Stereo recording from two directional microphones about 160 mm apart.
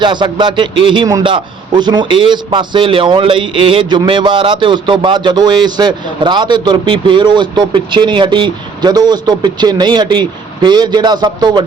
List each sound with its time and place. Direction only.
0.0 s a man's voice: 30° right (ahead or behind)